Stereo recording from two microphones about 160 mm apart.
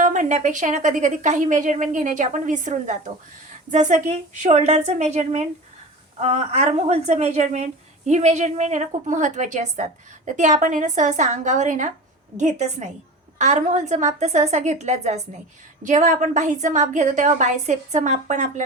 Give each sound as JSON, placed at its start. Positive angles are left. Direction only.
{"t": 0.0, "sound": "a woman's voice", "side_deg": -50}